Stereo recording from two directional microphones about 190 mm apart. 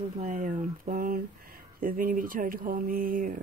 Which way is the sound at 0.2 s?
45° right (ahead or behind).